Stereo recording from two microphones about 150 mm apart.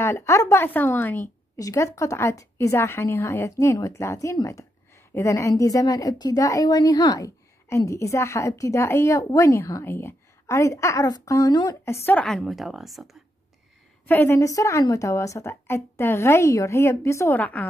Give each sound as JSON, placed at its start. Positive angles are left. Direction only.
{"t": 0.0, "sound": "a woman's voice", "side_deg": 20}
{"t": 14.0, "sound": "a woman's voice", "side_deg": 15}